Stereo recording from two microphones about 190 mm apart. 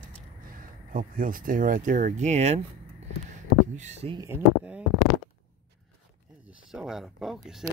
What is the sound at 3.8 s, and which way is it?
Speech, 35° right (ahead or behind).